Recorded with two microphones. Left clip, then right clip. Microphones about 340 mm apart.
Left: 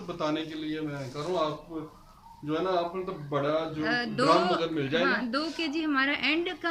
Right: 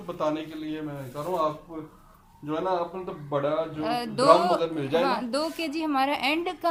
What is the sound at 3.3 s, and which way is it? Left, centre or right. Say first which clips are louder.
A woman's voice: right 2 dB; centre.